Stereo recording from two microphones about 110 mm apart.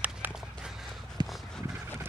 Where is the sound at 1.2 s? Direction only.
40° right (ahead or behind).